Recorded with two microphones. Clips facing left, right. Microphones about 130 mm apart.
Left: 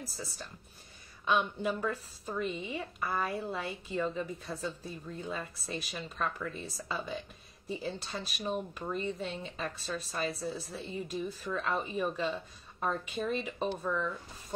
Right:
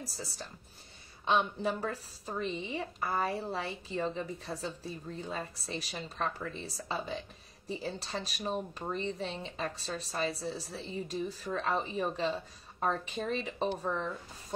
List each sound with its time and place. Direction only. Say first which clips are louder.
1.2 s speech: right 1 dB; 30° right (ahead or behind)